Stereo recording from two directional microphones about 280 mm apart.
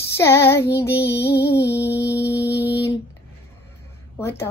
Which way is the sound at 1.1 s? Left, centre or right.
Left.